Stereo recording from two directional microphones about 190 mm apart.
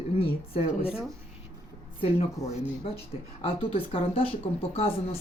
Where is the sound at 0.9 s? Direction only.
5° right (ahead or behind).